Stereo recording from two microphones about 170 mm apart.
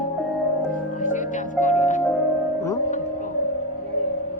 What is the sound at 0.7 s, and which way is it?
Music, 50° left (ahead or behind).